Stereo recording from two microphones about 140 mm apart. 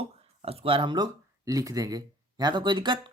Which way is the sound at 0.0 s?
45° right (ahead or behind).